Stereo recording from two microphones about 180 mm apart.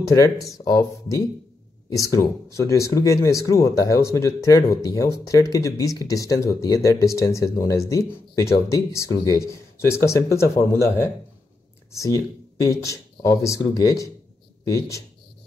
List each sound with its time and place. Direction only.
0.0 s speech: 20° left (ahead or behind)